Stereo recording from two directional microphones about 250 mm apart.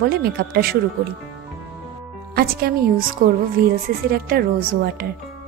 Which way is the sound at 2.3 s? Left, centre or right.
Right.